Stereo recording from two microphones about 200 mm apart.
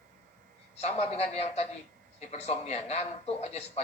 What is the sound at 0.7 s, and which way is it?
Speech, 35° left (ahead or behind).